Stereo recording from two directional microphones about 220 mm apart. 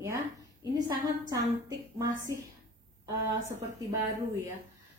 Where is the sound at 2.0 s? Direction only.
15° right (ahead or behind).